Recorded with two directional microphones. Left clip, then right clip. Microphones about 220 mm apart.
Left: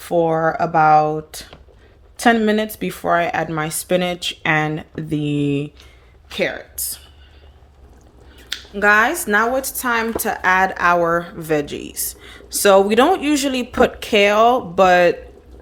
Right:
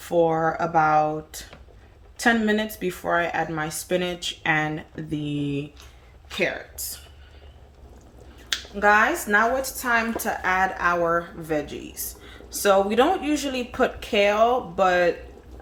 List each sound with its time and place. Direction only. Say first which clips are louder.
0.0 s a woman's voice: left 4 dB; 40° left (ahead or behind)
8.4 s speech: left 4 dB; 40° left (ahead or behind)